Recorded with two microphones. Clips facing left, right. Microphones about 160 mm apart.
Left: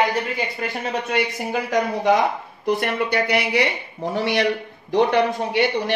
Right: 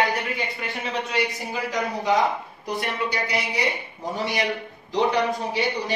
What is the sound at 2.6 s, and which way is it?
A man's voice, 60° left (ahead or behind).